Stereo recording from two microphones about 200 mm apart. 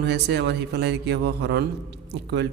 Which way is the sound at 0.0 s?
60° right (ahead or behind).